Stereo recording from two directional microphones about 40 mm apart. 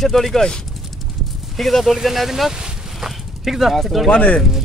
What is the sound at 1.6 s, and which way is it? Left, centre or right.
Speech, centre.